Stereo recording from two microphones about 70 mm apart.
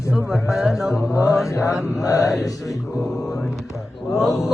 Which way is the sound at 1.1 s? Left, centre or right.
Left.